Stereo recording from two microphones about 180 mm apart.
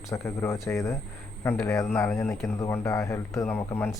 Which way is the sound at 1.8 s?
5° left (ahead or behind).